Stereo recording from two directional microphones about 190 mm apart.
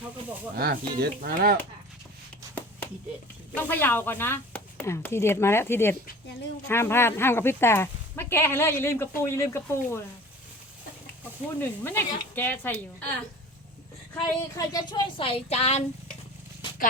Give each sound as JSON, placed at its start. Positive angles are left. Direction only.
{"t": 0.5, "sound": "speech", "side_deg": -55}
{"t": 3.5, "sound": "speech", "side_deg": 10}
{"t": 11.6, "sound": "speech", "side_deg": 10}
{"t": 14.2, "sound": "speech", "side_deg": 20}